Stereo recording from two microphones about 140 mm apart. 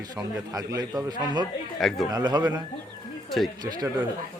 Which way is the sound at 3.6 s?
30° right (ahead or behind).